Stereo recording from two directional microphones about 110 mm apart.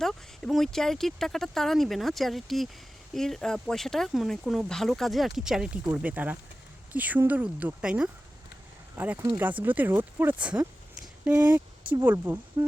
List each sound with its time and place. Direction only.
0.0 s speech: 5° left (ahead or behind)
9.0 s speech: 20° right (ahead or behind)